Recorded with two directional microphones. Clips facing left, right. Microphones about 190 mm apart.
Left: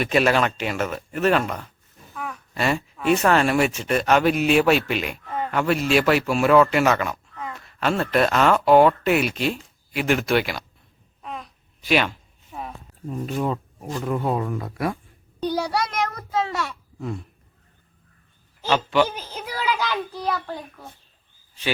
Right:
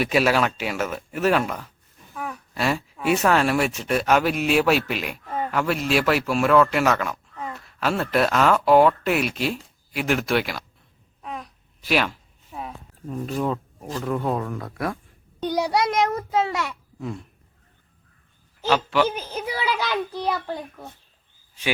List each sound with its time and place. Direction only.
0.0 s speech: 5° right (ahead or behind)
7.5 s a sound: centre (ahead or behind)
8.1 s speech: centre (ahead or behind)
11.2 s a sound: centre (ahead or behind)
14.0 s speech: 5° left (ahead or behind)
15.5 s a child's voice: 20° right (ahead or behind)
17.0 s speech: centre (ahead or behind)
18.6 s speech: centre (ahead or behind)